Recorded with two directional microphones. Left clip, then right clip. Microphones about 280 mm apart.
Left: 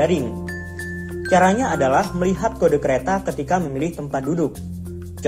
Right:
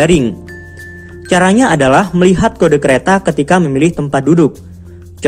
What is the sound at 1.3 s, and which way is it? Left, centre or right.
Speech, right.